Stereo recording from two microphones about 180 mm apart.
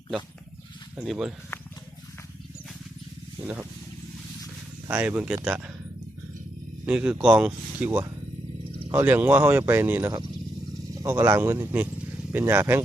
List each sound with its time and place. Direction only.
0.9 s speech: 5° right (ahead or behind)
4.9 s speech: 10° right (ahead or behind)
6.8 s speech: 5° right (ahead or behind)